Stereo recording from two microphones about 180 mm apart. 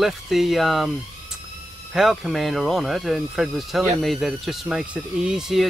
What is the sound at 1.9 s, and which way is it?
Speech, centre (ahead or behind).